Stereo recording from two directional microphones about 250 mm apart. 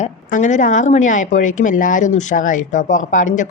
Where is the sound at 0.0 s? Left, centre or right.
Left.